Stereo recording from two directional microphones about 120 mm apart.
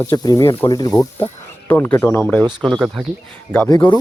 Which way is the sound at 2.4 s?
35° right (ahead or behind).